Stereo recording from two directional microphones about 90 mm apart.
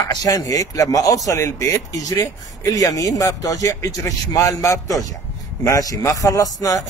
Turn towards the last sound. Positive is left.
turn(degrees=40)  # may be behind; listen again after turning